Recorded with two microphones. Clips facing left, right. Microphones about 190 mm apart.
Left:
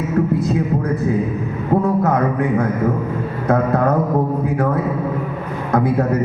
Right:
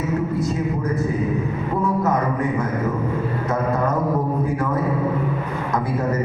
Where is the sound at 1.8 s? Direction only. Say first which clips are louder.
Left 1 dB; 60° left (ahead or behind).